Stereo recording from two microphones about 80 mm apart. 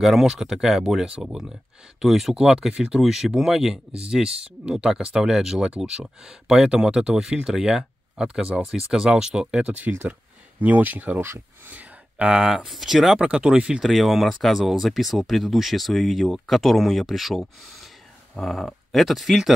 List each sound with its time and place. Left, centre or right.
0.0 s speech: centre; by 11.8 s right
12.2 s speech: centre
13.8 s speech: centre